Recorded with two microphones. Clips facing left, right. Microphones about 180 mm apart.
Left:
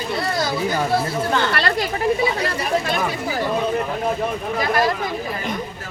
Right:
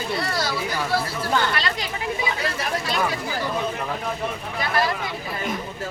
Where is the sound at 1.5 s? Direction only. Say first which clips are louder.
Left 6 dB; 60° left (ahead or behind).